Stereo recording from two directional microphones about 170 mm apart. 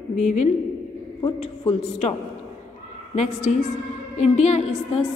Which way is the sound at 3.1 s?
45° left (ahead or behind).